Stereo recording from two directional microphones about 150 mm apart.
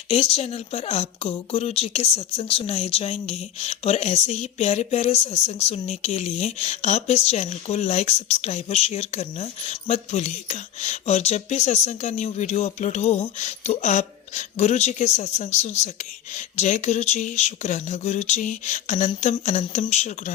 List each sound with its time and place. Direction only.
0.1 s speech: 40° left (ahead or behind)